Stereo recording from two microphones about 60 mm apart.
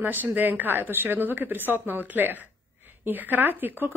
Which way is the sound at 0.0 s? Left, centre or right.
Right.